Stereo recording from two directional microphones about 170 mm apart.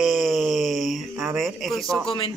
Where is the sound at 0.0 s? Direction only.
Centre (ahead or behind).